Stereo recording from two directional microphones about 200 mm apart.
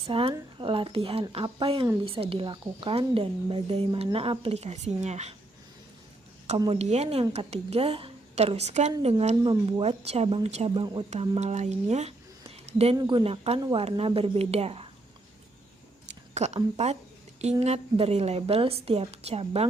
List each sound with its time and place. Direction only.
0.0 s speech: 30° right (ahead or behind)
6.6 s a woman's voice: 30° right (ahead or behind)
16.0 s a sound: 35° right (ahead or behind)
16.7 s a woman's voice: 35° right (ahead or behind)